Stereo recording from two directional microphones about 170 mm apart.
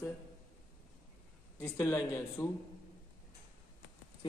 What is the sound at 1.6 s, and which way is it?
Speech, 20° left (ahead or behind).